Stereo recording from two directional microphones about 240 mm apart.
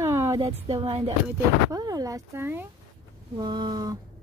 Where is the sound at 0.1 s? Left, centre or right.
Centre.